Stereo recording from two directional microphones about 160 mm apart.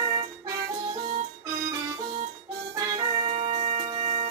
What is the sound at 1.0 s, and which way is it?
Music, 55° right (ahead or behind).